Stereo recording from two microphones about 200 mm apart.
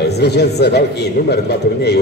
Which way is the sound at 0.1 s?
55° left (ahead or behind).